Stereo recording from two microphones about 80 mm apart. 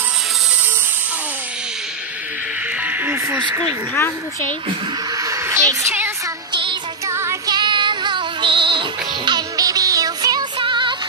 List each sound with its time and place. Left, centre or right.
2.8 s speech: right
5.1 s a woman's voice: right
6.5 s music: right
7.1 s music: right
7.4 s music: right
9.6 s music: right
10.6 s music: right